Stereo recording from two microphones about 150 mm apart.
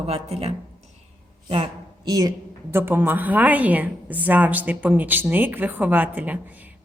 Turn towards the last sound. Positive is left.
turn(degrees=-10)  # may be behind; listen again after turning